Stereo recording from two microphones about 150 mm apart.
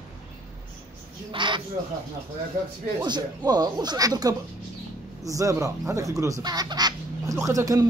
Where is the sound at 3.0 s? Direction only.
30° right (ahead or behind).